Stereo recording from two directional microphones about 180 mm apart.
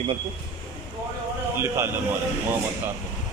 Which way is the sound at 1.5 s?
15° right (ahead or behind).